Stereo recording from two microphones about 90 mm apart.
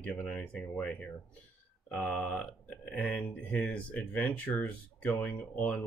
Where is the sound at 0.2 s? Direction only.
15° left (ahead or behind).